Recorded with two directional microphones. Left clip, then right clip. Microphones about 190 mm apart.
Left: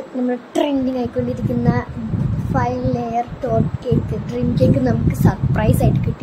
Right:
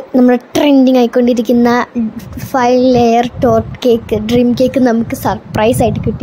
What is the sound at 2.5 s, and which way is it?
Speech, 45° right (ahead or behind).